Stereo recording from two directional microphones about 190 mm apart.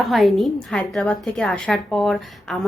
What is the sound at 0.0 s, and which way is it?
A woman's voice, centre (ahead or behind).